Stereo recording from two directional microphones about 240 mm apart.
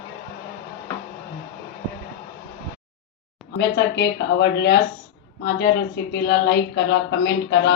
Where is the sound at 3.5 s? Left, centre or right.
Left.